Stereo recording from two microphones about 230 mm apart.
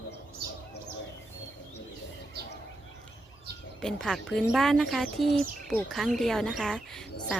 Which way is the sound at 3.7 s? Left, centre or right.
Centre.